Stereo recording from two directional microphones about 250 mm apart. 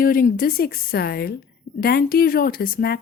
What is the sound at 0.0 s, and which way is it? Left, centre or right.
A woman's voice, left.